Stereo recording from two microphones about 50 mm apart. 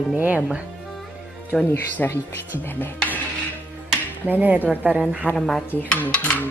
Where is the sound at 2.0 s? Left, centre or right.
Left.